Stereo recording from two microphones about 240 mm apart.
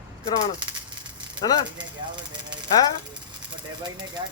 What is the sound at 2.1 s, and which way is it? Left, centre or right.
Speech, centre.